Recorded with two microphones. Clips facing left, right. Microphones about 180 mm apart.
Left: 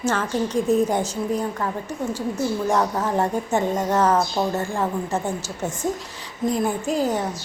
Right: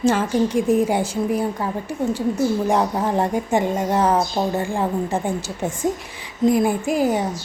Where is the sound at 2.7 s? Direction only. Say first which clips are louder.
Right 2 dB; 15° right (ahead or behind).